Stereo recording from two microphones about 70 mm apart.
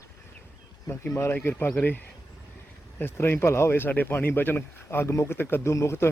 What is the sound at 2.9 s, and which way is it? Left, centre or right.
Speech, left.